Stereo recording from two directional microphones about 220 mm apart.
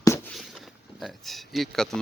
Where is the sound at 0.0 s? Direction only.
10° left (ahead or behind).